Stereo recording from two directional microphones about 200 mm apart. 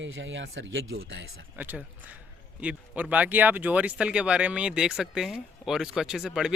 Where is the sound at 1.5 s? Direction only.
10° right (ahead or behind).